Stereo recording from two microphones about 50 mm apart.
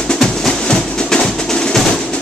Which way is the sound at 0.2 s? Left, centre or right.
Centre.